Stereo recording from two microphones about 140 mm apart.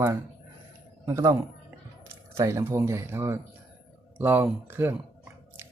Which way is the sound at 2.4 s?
20° right (ahead or behind).